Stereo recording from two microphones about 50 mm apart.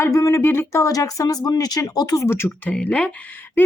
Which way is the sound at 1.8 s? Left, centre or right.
Left.